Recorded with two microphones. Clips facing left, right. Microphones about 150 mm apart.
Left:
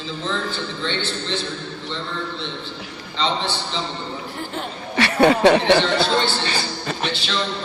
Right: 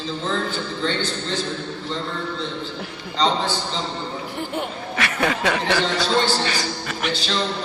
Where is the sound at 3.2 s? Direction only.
40° right (ahead or behind).